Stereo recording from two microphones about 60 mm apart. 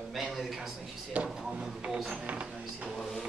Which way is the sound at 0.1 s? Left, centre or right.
Centre.